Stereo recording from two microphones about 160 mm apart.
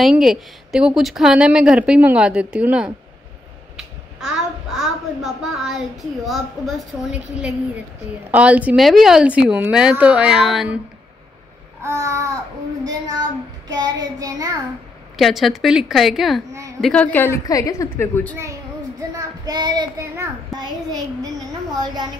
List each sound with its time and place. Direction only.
0.0 s a woman's voice: centre (ahead or behind)
11.8 s child singing: 15° right (ahead or behind)
13.7 s child singing: 25° right (ahead or behind)
15.1 s a woman's voice: centre (ahead or behind)
19.1 s child singing: 25° right (ahead or behind)